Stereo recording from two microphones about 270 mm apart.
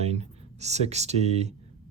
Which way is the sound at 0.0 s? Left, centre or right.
Right.